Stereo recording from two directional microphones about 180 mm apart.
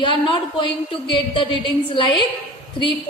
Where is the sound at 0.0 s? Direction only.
25° left (ahead or behind).